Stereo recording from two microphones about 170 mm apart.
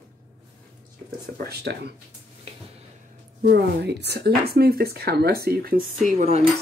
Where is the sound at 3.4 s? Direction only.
75° right (ahead or behind).